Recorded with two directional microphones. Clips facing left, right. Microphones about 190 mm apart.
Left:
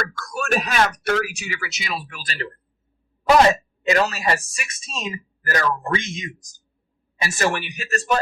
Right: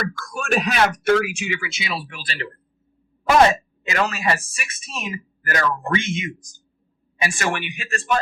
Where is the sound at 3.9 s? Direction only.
35° left (ahead or behind).